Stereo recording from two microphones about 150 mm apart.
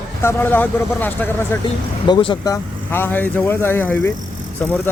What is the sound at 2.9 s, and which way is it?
Speech, 15° left (ahead or behind).